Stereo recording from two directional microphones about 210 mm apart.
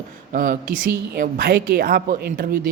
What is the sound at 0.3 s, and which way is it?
Speech, 40° right (ahead or behind).